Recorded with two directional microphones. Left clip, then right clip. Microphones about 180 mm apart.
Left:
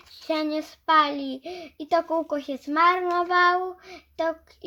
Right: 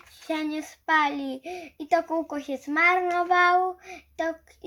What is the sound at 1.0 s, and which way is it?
A child's voice, 55° left (ahead or behind).